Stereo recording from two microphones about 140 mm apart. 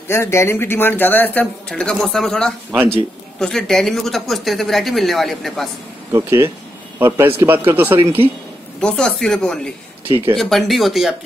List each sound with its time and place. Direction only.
0.1 s speech: 20° left (ahead or behind); by 5.7 s centre (ahead or behind)
6.1 s a man's voice: 20° right (ahead or behind)
8.8 s speech: 5° left (ahead or behind)
10.0 s a man's voice: 15° right (ahead or behind)
10.3 s speech: centre (ahead or behind)